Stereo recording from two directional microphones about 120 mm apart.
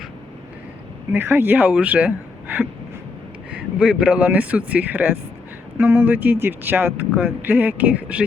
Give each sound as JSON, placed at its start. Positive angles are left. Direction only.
{"t": 1.1, "sound": "a man's voice", "side_deg": -20}